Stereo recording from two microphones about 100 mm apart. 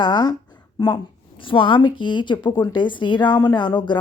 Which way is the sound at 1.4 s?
60° left (ahead or behind).